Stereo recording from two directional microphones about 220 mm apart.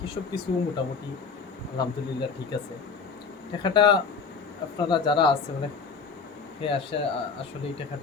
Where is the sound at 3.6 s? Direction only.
20° left (ahead or behind).